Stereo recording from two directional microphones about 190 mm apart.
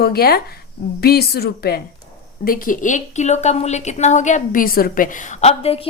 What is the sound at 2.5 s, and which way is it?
A woman's voice, 45° left (ahead or behind).